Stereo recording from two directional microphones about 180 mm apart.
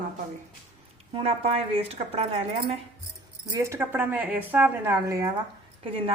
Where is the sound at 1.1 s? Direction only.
35° right (ahead or behind).